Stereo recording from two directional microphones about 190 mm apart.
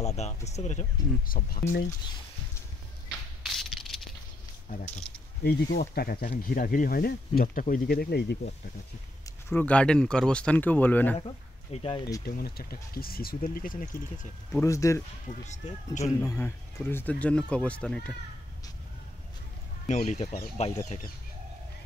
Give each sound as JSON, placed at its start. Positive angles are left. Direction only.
{"t": 0.0, "sound": "a sound", "side_deg": 35}
{"t": 0.5, "sound": "speech", "side_deg": 35}
{"t": 1.2, "sound": "speech", "side_deg": 50}
{"t": 3.4, "sound": "a sound", "side_deg": 0}
{"t": 4.7, "sound": "speech", "side_deg": 50}
{"t": 5.1, "sound": "speech", "side_deg": 5}
{"t": 5.4, "sound": "speech", "side_deg": 55}
{"t": 9.5, "sound": "speech", "side_deg": 10}
{"t": 11.1, "sound": "speech", "side_deg": 30}
{"t": 12.3, "sound": "speech", "side_deg": 55}
{"t": 14.5, "sound": "speech", "side_deg": 15}
{"t": 15.4, "sound": "speech", "side_deg": 40}
{"t": 16.0, "sound": "speech", "side_deg": 15}
{"t": 19.9, "sound": "speech", "side_deg": 35}